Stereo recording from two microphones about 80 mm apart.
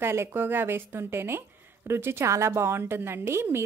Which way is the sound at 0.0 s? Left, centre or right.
Right.